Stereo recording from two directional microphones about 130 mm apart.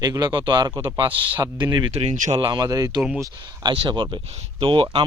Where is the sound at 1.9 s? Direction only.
65° right (ahead or behind).